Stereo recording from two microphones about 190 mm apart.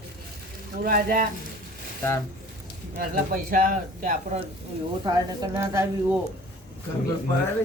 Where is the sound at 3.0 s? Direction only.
50° right (ahead or behind).